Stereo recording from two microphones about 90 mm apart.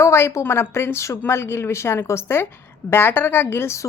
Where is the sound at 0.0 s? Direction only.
30° left (ahead or behind).